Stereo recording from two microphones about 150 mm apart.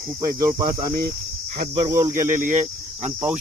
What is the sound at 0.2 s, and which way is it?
Speech, 20° right (ahead or behind).